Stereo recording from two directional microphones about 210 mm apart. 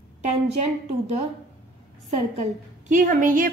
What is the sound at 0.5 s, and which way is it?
A woman's voice, 30° right (ahead or behind).